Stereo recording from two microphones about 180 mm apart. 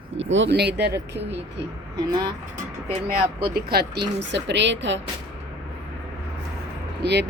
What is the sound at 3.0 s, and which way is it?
Speech, 60° right (ahead or behind).